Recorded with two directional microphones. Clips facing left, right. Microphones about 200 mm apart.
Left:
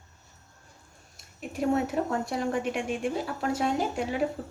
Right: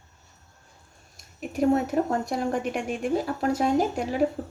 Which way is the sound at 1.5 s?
40° right (ahead or behind).